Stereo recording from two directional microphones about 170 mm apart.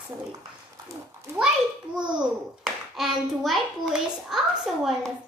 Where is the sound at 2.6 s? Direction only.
Centre (ahead or behind).